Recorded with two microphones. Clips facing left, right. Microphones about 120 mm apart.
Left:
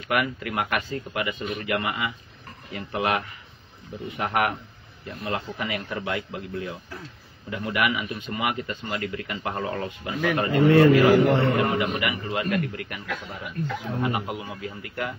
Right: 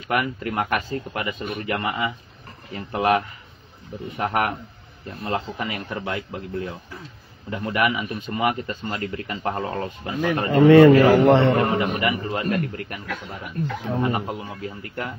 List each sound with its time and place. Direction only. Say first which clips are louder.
0.1 s a man's voice: right 2 dB; 35° right (ahead or behind)
4.2 s a man's voice: right 1 dB; 40° right (ahead or behind)
10.7 s a man's voice: right 5 dB; 90° right
11.7 s a man's voice: right 3 dB; 35° right (ahead or behind)